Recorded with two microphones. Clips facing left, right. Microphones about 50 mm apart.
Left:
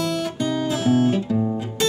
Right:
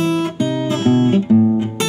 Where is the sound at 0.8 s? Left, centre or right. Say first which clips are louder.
Right 5 dB; right.